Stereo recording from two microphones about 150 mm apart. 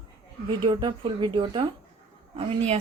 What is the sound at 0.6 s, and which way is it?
A woman's voice, 35° right (ahead or behind).